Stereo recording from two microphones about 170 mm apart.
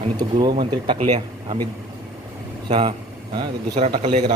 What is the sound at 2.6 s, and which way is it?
Speech, 30° right (ahead or behind).